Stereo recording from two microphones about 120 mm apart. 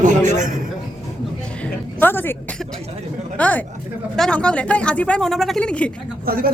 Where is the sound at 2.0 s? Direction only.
15° left (ahead or behind).